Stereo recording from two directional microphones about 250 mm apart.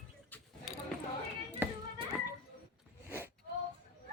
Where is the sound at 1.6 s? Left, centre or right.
Centre.